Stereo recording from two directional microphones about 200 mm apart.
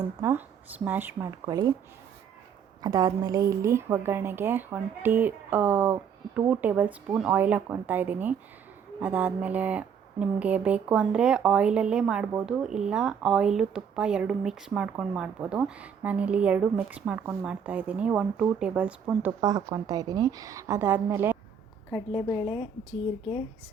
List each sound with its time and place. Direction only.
0.2 s a woman's voice: 15° right (ahead or behind)
2.8 s a woman's voice: 20° right (ahead or behind)
19.4 s a woman's voice: 20° right (ahead or behind)
22.1 s a woman's voice: 30° left (ahead or behind)